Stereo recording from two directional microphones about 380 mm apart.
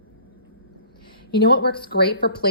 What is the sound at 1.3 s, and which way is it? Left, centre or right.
Speech, left.